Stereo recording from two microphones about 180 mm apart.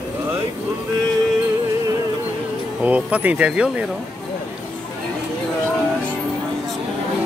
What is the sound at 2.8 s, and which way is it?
Speech, 10° right (ahead or behind).